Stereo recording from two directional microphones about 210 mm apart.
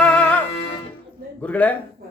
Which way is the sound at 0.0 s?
5° left (ahead or behind).